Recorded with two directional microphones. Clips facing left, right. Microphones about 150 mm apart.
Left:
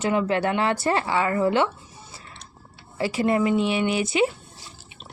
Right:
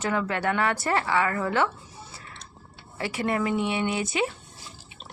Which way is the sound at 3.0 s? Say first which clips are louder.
Left 5 dB; 25° left (ahead or behind).